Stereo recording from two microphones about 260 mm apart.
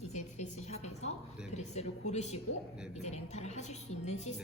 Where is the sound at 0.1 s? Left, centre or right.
Left.